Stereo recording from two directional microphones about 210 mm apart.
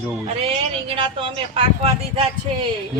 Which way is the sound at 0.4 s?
25° right (ahead or behind).